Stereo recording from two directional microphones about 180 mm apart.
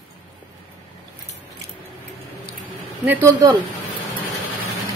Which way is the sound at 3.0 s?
15° right (ahead or behind).